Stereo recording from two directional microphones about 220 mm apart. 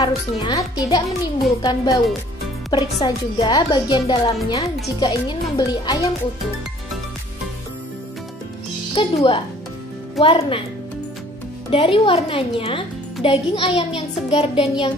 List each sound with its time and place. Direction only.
0.0 s a woman's voice: 20° left (ahead or behind)
8.9 s a woman's voice: 25° left (ahead or behind)
11.7 s a woman's voice: 25° left (ahead or behind)